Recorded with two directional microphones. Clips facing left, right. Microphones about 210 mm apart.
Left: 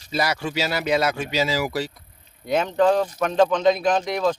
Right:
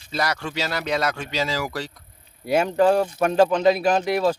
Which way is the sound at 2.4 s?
10° right (ahead or behind).